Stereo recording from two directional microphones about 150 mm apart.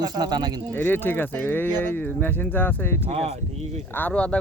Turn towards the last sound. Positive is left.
turn(degrees=10)  # may be behind; listen again after turning